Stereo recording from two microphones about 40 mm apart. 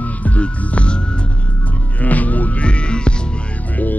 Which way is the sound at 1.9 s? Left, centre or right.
Left.